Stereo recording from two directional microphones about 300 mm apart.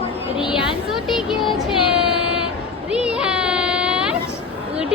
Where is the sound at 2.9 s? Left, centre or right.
Centre.